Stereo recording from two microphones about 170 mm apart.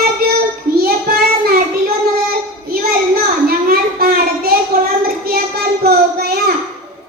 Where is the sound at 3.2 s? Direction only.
65° right (ahead or behind).